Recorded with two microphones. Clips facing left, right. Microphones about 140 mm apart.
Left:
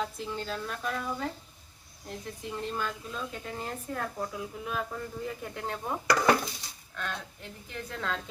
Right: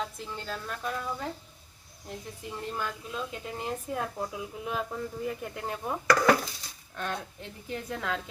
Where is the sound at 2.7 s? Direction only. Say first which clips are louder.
Even; 10° right (ahead or behind).